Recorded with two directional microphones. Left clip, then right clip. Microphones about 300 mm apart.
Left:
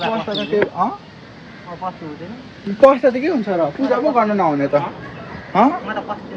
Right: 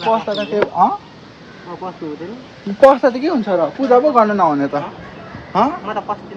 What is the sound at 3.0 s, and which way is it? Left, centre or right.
Speech, centre.